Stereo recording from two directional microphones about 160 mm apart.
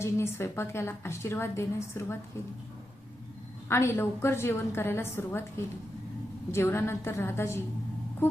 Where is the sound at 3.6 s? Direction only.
15° left (ahead or behind).